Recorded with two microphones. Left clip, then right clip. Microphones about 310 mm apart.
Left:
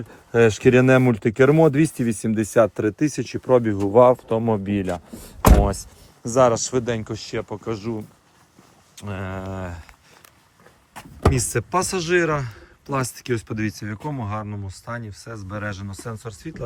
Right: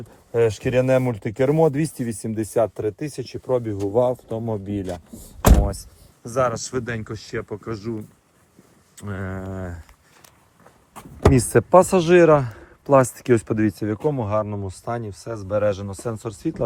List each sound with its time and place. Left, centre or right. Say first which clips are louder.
0.3 s speech: left 3 dB; left
6.3 s speech: left 5 dB; centre
11.3 s speech: right 8 dB; centre